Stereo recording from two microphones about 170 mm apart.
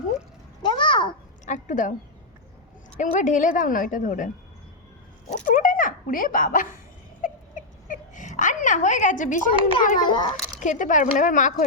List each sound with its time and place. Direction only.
0.6 s a sound: 30° left (ahead or behind)
1.5 s a woman's voice: 45° left (ahead or behind)
3.0 s a woman's voice: 45° left (ahead or behind)
5.5 s speech: 50° left (ahead or behind)
7.2 s a sound: 50° left (ahead or behind)
9.8 s a woman's voice: 55° left (ahead or behind)
10.1 s a child's voice: 25° left (ahead or behind)
10.6 s a woman's voice: 50° left (ahead or behind)